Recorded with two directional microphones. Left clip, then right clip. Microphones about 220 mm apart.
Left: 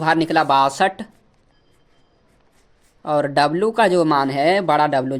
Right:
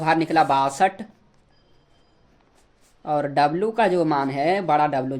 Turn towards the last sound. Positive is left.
turn(degrees=30)  # may be behind; listen again after turning